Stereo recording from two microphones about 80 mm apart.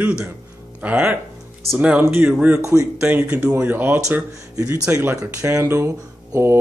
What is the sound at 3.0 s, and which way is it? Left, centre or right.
Speech, centre.